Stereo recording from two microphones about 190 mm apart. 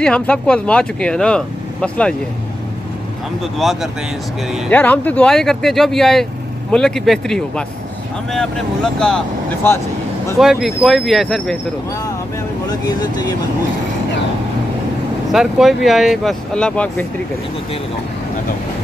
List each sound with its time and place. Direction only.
0.0 s speech: 5° left (ahead or behind)
3.5 s speech: centre (ahead or behind)
12.6 s speech: 20° left (ahead or behind)
15.3 s speech: centre (ahead or behind)